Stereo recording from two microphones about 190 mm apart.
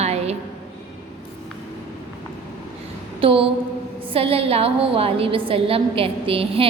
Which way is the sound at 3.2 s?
30° right (ahead or behind).